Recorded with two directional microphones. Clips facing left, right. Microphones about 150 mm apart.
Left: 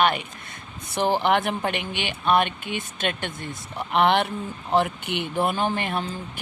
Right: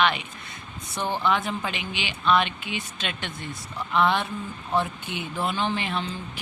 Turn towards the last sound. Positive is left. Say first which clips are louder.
# left 2 dB
turn(degrees=50)  # may be behind; listen again after turning